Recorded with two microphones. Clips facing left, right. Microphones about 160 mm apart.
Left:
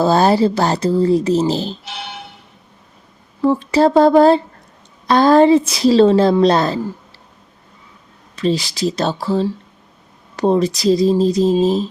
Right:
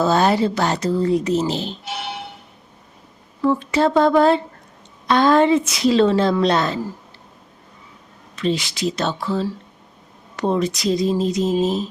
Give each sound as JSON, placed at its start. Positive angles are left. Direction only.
{"t": 0.0, "sound": "speech", "side_deg": 35}
{"t": 3.4, "sound": "speech", "side_deg": 35}
{"t": 8.4, "sound": "speech", "side_deg": 35}